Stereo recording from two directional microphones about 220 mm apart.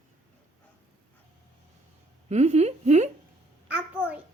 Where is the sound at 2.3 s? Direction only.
30° right (ahead or behind).